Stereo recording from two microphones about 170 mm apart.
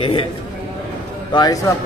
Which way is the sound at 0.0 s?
30° left (ahead or behind).